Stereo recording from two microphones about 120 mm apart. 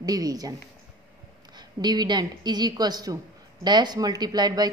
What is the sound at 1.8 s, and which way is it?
A woman's voice, 35° right (ahead or behind).